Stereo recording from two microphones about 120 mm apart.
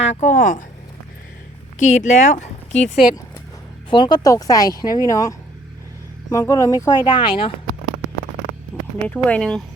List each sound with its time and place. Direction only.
0.0 s speech: 80° left
1.8 s speech: 75° left (ahead or behind)
3.8 s speech: 40° left (ahead or behind)
4.3 s speech: 30° left (ahead or behind)
7.0 s speech: 45° left (ahead or behind)
8.7 s a sound: 15° left (ahead or behind)
9.0 s speech: 10° left (ahead or behind)